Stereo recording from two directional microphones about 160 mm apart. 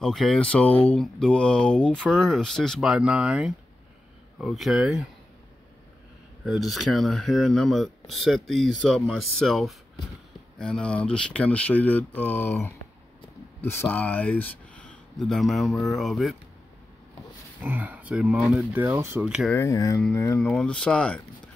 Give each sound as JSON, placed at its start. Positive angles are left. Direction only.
{"t": 0.0, "sound": "speech", "side_deg": 0}
{"t": 6.4, "sound": "speech", "side_deg": 0}
{"t": 17.6, "sound": "speech", "side_deg": -10}
{"t": 19.2, "sound": "speech", "side_deg": -5}
{"t": 19.5, "sound": "speech", "side_deg": 20}
{"t": 20.4, "sound": "speech", "side_deg": 5}